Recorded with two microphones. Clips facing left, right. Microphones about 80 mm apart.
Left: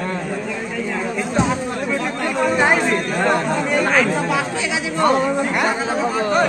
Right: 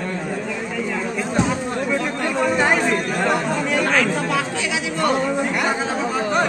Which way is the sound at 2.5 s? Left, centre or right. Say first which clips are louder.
Left 3 dB; centre.